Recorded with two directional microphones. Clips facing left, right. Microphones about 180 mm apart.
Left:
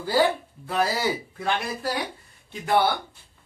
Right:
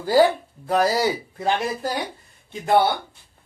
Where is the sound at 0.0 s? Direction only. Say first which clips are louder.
Right 5 dB; 40° right (ahead or behind).